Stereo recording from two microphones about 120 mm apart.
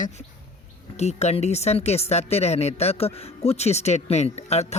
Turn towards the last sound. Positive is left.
turn(degrees=65)  # may be behind; listen again after turning